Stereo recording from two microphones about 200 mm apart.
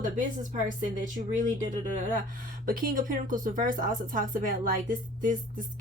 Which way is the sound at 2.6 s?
45° right (ahead or behind).